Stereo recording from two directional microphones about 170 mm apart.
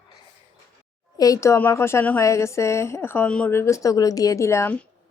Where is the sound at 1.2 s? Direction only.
20° left (ahead or behind).